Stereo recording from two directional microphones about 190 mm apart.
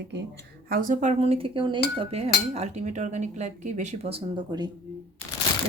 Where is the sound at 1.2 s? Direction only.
30° right (ahead or behind).